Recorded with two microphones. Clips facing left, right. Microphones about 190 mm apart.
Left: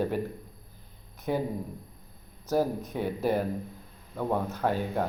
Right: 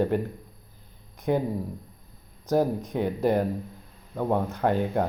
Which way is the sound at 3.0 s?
15° right (ahead or behind).